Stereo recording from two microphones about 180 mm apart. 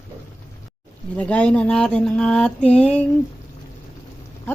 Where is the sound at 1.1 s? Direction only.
5° left (ahead or behind).